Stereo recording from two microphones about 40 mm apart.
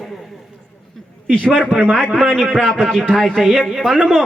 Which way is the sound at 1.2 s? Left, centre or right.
Right.